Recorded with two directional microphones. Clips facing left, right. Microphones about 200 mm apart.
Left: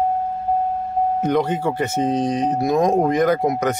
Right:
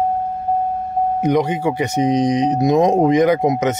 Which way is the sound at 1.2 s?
15° right (ahead or behind).